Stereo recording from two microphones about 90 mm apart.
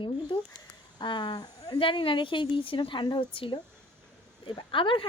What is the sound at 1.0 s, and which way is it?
Speech, 60° left (ahead or behind).